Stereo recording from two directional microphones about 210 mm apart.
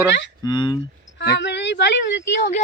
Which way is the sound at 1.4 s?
55° left (ahead or behind).